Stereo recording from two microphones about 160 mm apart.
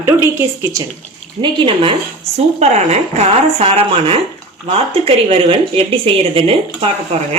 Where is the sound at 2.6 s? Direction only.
45° right (ahead or behind).